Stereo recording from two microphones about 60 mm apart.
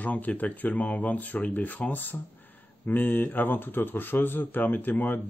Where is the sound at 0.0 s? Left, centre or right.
Left.